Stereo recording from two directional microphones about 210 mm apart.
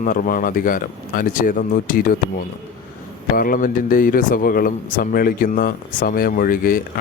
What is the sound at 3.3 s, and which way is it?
Speech, 45° left (ahead or behind).